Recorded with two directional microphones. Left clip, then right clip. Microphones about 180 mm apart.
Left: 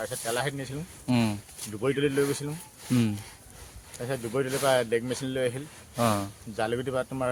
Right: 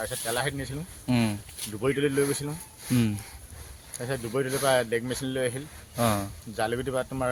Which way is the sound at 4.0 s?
10° right (ahead or behind).